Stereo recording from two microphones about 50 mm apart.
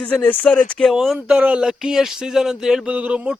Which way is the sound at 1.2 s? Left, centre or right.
Right.